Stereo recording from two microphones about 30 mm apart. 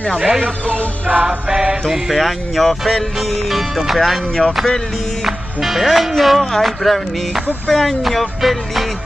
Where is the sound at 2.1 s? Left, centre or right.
Centre.